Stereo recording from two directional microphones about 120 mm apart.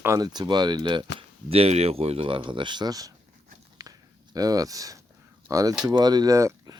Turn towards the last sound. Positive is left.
turn(degrees=-30)  # may be behind; listen again after turning